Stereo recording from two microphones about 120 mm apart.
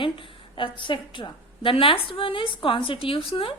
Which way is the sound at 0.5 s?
45° left (ahead or behind).